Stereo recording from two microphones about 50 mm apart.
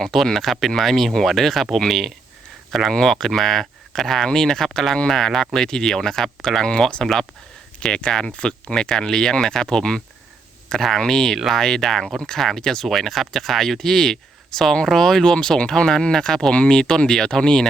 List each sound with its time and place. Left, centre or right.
0.0 s speech: centre